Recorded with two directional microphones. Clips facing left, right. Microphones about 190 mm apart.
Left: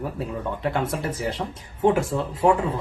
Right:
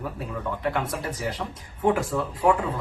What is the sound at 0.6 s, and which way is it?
Speech, 25° left (ahead or behind).